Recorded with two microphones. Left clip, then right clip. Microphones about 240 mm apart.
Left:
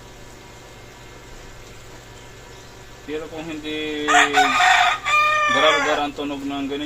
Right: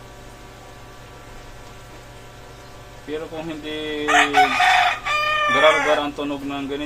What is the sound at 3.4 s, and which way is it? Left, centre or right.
Speech, right.